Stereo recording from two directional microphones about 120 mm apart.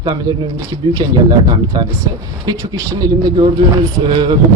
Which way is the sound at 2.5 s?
35° right (ahead or behind).